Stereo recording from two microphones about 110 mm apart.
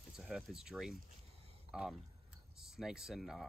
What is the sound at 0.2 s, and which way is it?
Speech, 5° right (ahead or behind).